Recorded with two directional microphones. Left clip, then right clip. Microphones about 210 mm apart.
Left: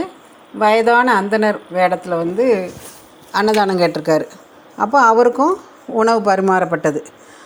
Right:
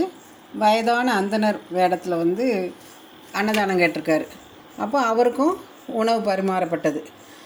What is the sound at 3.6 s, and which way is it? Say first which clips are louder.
A woman's voice: left 4 dB; 20° left (ahead or behind).